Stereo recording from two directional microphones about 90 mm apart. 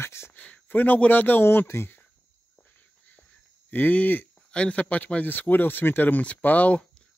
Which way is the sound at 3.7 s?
20° left (ahead or behind).